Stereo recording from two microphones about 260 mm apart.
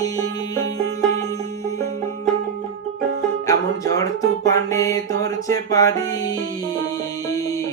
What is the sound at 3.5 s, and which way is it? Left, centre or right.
Music, centre.